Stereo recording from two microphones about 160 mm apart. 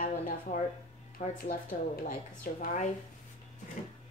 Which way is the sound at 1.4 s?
60° left (ahead or behind).